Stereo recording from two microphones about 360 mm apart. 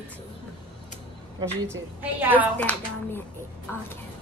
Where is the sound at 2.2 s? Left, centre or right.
Centre.